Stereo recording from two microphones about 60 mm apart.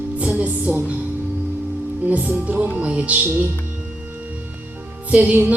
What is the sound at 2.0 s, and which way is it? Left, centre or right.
Music, right.